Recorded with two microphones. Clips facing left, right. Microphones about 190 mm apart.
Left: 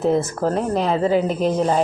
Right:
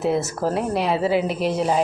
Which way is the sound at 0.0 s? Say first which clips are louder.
Left 3 dB; 10° right (ahead or behind).